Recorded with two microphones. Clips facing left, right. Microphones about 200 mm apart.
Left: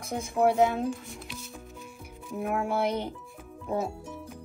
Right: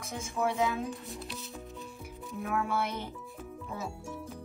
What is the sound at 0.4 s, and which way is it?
Speech, 55° left (ahead or behind).